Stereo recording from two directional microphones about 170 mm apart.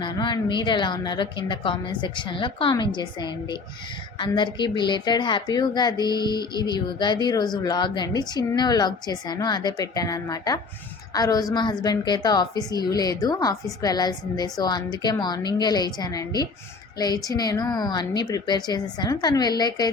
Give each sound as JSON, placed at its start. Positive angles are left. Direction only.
{"t": 0.0, "sound": "speech", "side_deg": 25}